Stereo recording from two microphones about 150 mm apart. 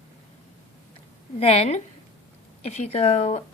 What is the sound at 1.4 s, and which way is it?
Speech, 45° left (ahead or behind).